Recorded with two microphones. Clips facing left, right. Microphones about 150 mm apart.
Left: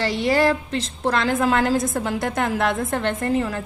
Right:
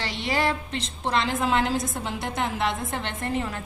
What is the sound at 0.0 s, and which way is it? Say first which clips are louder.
A woman's voice: left 7 dB; 40° left (ahead or behind).